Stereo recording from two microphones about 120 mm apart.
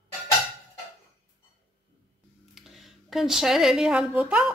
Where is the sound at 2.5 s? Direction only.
Centre (ahead or behind).